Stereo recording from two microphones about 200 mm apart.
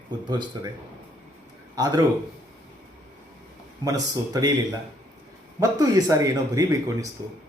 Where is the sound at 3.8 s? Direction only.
15° right (ahead or behind).